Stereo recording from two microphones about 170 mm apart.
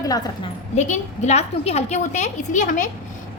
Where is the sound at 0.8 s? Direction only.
45° left (ahead or behind).